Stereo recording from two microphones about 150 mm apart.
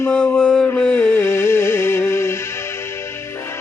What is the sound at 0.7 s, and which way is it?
Music, 10° left (ahead or behind).